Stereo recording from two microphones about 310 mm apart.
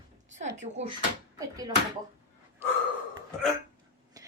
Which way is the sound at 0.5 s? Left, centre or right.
Right.